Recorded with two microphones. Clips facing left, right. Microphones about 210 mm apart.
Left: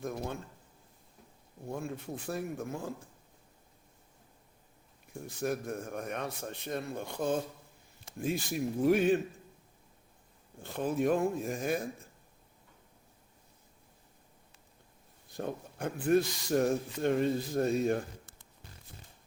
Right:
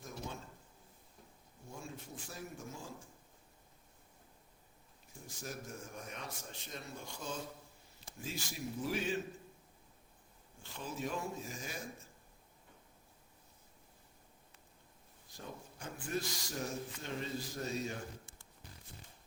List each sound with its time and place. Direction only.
0.0 s a man's voice: 60° left (ahead or behind)
1.6 s a man's voice: 60° left (ahead or behind)
5.2 s a man's voice: 60° left (ahead or behind)
8.5 s a man's voice: 55° left (ahead or behind)
10.6 s a man's voice: 55° left (ahead or behind)
15.3 s a man's voice: 60° left (ahead or behind)